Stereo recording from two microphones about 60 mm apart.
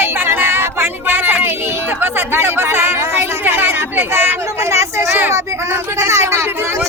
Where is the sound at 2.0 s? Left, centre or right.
Right.